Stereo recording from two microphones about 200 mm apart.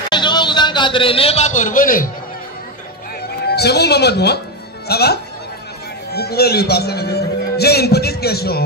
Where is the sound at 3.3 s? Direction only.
55° left (ahead or behind).